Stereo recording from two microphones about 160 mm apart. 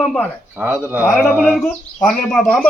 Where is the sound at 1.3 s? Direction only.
5° right (ahead or behind).